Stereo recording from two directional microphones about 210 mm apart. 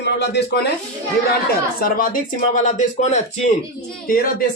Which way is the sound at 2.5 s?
35° left (ahead or behind).